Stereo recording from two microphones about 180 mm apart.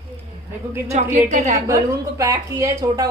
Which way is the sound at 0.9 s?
40° right (ahead or behind).